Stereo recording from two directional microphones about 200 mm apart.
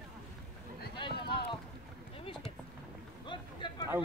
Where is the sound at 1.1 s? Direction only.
55° left (ahead or behind).